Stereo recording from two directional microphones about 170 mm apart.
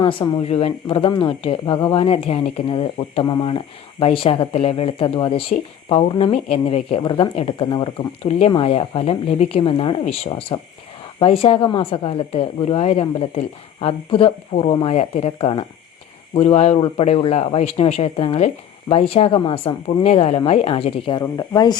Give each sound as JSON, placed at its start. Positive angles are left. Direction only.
{"t": 0.0, "sound": "speech", "side_deg": 30}